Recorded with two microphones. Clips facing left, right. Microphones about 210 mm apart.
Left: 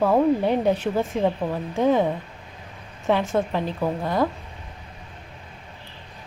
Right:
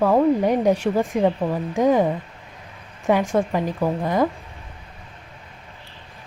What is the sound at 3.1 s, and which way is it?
A woman's voice, 10° right (ahead or behind).